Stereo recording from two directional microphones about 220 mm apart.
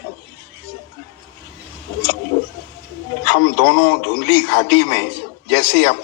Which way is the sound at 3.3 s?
50° left (ahead or behind).